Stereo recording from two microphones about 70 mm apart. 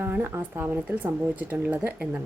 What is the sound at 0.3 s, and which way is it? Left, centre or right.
Speech, right.